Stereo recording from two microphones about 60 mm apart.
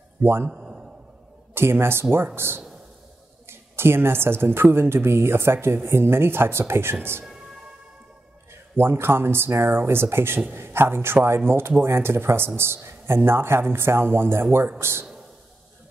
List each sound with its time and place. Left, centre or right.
0.2 s a man's voice: right
0.5 s a sound: centre
1.5 s a woman's voice: right
8.7 s a woman's voice: right